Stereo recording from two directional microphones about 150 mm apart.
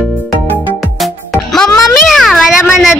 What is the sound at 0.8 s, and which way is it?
Music, centre (ahead or behind).